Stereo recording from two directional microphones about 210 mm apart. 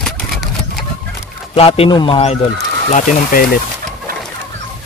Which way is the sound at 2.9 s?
40° left (ahead or behind).